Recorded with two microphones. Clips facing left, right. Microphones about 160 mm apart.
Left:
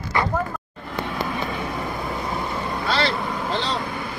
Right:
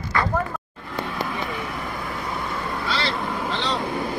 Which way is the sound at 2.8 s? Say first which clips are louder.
Left 5 dB; 55° left (ahead or behind).